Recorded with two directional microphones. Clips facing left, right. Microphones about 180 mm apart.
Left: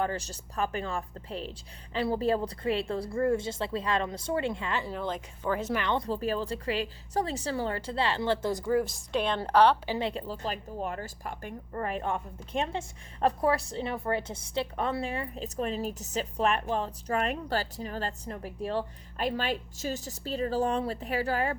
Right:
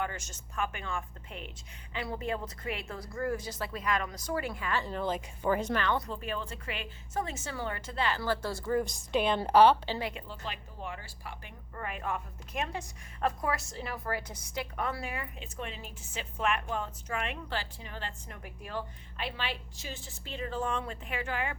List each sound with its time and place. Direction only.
0.0 s a woman's voice: 35° left (ahead or behind)
4.8 s a woman's voice: 5° left (ahead or behind)
5.7 s a woman's voice: 20° left (ahead or behind)
6.1 s a woman's voice: 35° left (ahead or behind); by 8.7 s 20° left (ahead or behind)
8.7 s a woman's voice: centre (ahead or behind)
10.0 s a woman's voice: 30° left (ahead or behind)